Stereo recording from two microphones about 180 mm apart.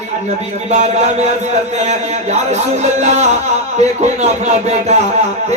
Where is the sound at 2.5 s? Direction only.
40° right (ahead or behind).